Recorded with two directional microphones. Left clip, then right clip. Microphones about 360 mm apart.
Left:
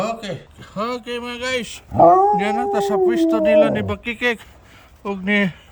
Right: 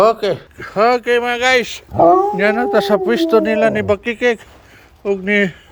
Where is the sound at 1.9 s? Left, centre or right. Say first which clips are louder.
Right 1 dB; right.